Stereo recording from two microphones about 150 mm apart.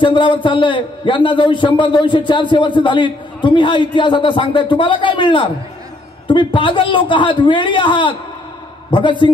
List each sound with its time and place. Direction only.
0.0 s a man's voice: 35° left (ahead or behind)